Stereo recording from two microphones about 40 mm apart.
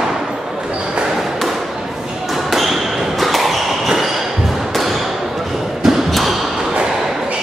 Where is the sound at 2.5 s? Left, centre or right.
Centre.